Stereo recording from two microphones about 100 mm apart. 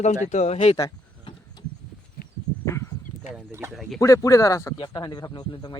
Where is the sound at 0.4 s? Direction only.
85° left.